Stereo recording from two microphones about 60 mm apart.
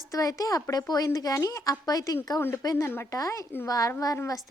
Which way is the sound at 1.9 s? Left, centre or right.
Left.